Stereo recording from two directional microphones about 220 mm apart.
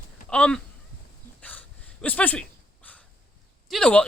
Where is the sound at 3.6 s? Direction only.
5° left (ahead or behind).